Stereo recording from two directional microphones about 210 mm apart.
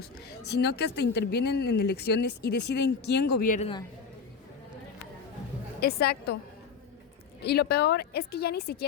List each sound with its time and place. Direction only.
0.3 s speech: 50° left (ahead or behind)
3.6 s a man's voice: 25° left (ahead or behind)
5.8 s speech: 50° left (ahead or behind)
7.4 s speech: 50° left (ahead or behind)